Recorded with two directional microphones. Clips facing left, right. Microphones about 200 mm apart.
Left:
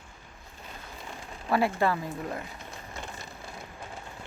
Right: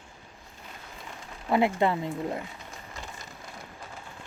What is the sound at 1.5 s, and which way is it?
Speech, 20° right (ahead or behind).